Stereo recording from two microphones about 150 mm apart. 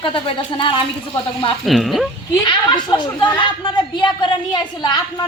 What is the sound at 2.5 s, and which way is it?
A woman's voice, 30° left (ahead or behind).